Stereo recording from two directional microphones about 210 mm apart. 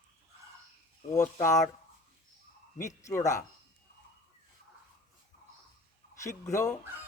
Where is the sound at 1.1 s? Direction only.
15° left (ahead or behind).